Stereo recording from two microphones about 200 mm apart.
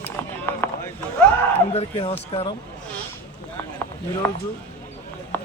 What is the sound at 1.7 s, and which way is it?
Speech, 30° left (ahead or behind).